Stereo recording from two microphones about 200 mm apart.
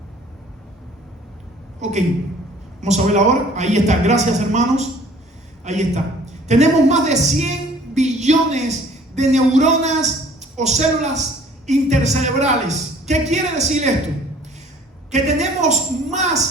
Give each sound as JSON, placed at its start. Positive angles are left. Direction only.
{"t": 1.8, "sound": "a woman's voice", "side_deg": -35}
{"t": 7.9, "sound": "music", "side_deg": -35}
{"t": 9.1, "sound": "a man's voice", "side_deg": -35}
{"t": 15.1, "sound": "a woman's voice", "side_deg": -35}